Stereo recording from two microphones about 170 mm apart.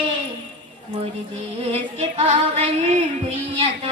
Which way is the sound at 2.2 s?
40° right (ahead or behind).